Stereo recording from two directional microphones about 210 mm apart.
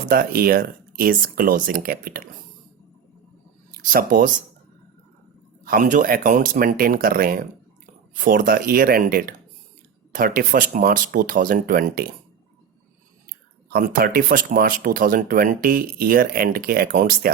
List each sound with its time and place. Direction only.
0.1 s speech: 45° right (ahead or behind)
3.8 s speech: 40° right (ahead or behind)
5.6 s speech: 40° right (ahead or behind)
13.7 s speech: 45° right (ahead or behind)